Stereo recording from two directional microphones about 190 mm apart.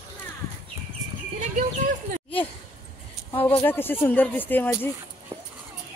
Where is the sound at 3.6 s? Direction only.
10° left (ahead or behind).